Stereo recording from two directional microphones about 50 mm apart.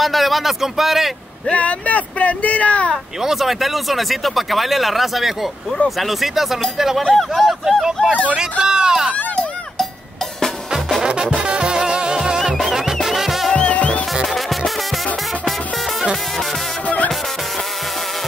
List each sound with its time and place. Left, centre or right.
0.0 s speech: centre
1.5 s speech: left
3.2 s speech: centre
8.4 s speech: centre
11.0 s music: centre
12.5 s music: centre
13.5 s music: left
14.2 s music: centre
16.8 s music: left